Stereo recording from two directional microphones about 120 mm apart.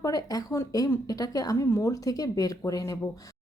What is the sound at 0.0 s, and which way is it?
Speech, 30° left (ahead or behind).